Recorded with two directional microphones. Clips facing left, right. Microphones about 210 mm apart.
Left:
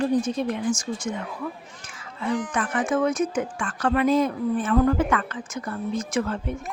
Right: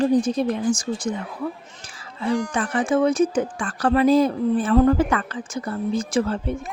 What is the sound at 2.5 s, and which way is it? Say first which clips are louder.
Speech: right 3 dB; 30° right (ahead or behind).